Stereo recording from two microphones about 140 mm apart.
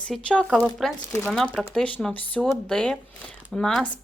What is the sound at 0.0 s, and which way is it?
Speech, 10° left (ahead or behind).